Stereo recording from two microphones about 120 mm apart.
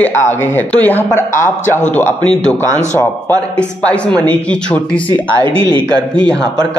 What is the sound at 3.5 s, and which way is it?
A man's voice, 10° left (ahead or behind).